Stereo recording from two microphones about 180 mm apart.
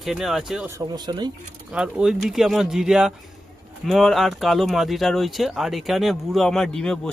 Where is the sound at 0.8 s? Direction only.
25° right (ahead or behind).